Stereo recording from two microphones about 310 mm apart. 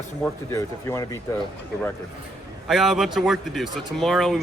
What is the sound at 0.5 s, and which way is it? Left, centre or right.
Speech, centre.